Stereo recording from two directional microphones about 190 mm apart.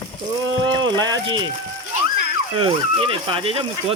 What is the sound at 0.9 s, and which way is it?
Speech, 20° right (ahead or behind).